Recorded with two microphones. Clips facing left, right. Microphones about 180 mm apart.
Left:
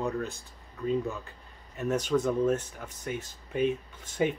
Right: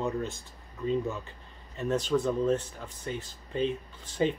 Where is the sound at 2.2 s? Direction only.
15° left (ahead or behind).